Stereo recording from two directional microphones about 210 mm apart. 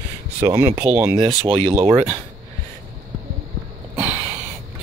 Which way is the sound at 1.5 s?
25° right (ahead or behind).